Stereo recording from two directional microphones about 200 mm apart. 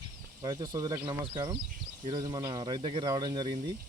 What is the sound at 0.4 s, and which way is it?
Speech, 20° right (ahead or behind).